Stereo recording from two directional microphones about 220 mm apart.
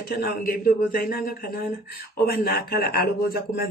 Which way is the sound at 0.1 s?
45° left (ahead or behind).